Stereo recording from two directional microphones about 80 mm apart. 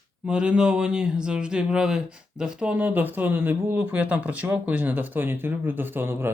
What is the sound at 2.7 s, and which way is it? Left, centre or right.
Speech, right.